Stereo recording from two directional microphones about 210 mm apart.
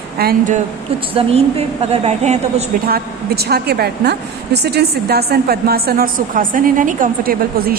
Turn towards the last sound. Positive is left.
turn(degrees=-45)  # may be behind; listen again after turning